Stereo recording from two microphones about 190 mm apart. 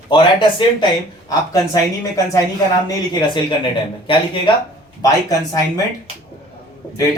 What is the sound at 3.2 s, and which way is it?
A man's voice, 25° left (ahead or behind).